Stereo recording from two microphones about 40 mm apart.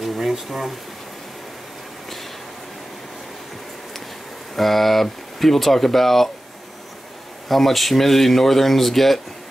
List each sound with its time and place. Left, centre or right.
0.0 s a sound: centre
4.6 s speech: centre
7.4 s speech: centre